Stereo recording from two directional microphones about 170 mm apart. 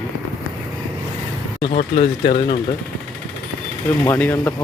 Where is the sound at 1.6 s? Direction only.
35° left (ahead or behind).